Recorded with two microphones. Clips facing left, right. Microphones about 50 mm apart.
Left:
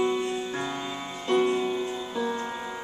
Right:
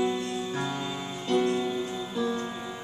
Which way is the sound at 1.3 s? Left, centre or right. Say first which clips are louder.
Left 2 dB; left.